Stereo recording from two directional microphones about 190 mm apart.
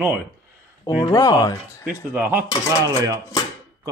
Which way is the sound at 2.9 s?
20° right (ahead or behind).